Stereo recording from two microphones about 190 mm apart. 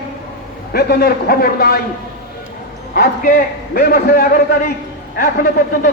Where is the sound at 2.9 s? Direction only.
50° left (ahead or behind).